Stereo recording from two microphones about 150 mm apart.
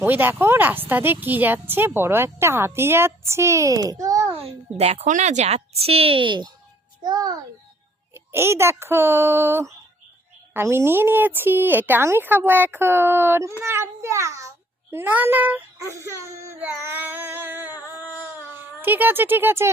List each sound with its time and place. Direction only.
0.0 s speech: 15° right (ahead or behind)
4.4 s a woman's voice: 40° right (ahead or behind); by 7.3 s 25° right (ahead or behind)
8.1 s speech: 15° right (ahead or behind)
17.8 s a sound: 15° right (ahead or behind)